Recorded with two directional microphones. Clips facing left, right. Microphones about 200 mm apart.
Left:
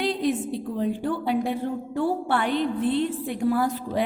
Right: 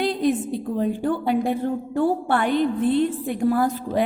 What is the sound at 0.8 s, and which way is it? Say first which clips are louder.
A woman's voice: right 3 dB; 50° right (ahead or behind).